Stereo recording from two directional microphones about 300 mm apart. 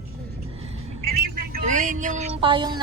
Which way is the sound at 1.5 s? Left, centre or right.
Right.